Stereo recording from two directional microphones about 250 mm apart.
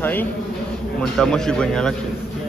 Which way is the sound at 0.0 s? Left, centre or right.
Centre.